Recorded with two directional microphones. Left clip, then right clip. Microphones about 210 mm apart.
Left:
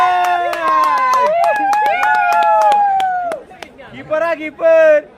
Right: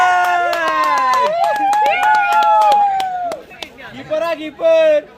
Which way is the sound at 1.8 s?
25° right (ahead or behind).